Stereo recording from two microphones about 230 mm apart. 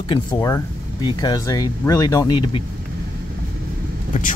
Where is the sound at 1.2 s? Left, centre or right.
Centre.